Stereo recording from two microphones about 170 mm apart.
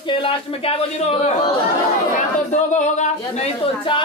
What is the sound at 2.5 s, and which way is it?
Speech, 45° left (ahead or behind).